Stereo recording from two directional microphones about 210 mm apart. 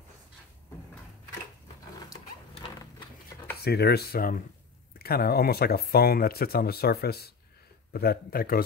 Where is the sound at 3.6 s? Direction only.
50° left (ahead or behind).